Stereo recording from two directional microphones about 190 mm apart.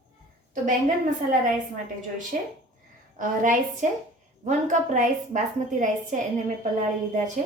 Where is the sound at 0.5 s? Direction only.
40° right (ahead or behind).